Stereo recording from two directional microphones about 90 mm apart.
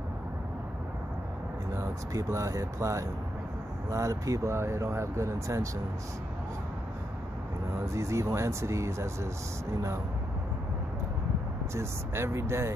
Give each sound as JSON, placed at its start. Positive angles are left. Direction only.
{"t": 1.8, "sound": "speech", "side_deg": -35}
{"t": 7.8, "sound": "speech", "side_deg": -35}
{"t": 11.7, "sound": "speech", "side_deg": -30}